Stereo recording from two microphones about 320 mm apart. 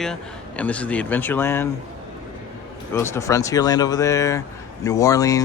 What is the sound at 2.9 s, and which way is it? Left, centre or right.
A woman's voice, centre.